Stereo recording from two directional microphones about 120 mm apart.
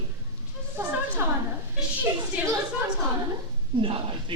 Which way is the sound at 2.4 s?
15° right (ahead or behind).